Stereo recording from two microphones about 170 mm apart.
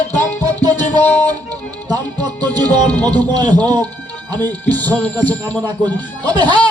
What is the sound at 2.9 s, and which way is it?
Speech, 10° left (ahead or behind).